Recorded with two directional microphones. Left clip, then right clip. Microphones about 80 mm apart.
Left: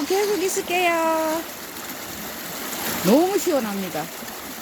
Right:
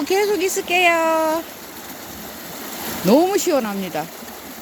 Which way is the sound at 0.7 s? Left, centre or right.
Centre.